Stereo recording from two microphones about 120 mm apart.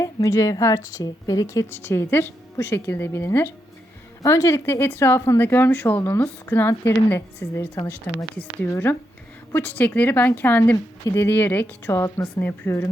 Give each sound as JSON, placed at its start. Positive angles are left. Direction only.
{"t": 0.0, "sound": "speech", "side_deg": 25}